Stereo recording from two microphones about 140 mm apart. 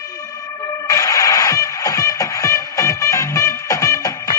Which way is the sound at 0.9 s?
25° left (ahead or behind).